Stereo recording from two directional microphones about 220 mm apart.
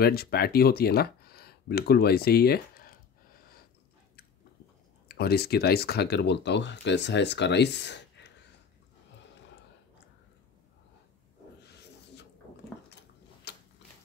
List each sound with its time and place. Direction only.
0.0 s speech: 45° left (ahead or behind)
5.0 s speech: 45° left (ahead or behind)
13.5 s a sound: 50° left (ahead or behind)